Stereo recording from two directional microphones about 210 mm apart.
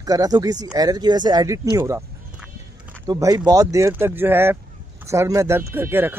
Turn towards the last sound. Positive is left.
turn(degrees=-10)  # may be behind; listen again after turning